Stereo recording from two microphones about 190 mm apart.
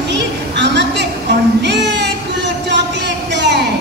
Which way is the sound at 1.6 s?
65° right (ahead or behind).